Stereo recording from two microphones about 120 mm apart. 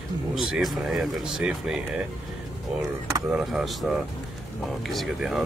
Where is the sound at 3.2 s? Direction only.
5° right (ahead or behind).